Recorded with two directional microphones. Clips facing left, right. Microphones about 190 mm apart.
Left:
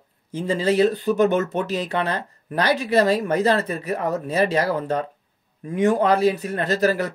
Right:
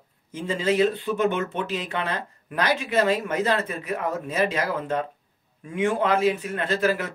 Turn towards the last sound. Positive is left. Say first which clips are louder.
# left 3 dB
turn(degrees=40)  # may be behind; listen again after turning